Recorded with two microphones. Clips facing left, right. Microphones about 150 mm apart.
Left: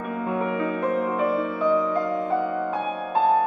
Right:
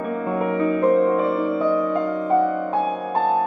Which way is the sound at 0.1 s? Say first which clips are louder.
Right 2 dB; 40° right (ahead or behind).